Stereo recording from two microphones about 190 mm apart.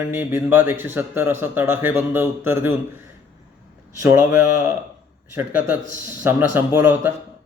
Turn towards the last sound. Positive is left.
turn(degrees=-10)  # may be behind; listen again after turning